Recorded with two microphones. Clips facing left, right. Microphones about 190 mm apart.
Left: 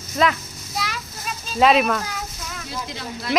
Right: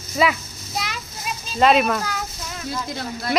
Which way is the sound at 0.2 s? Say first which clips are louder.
Even; 5° right (ahead or behind).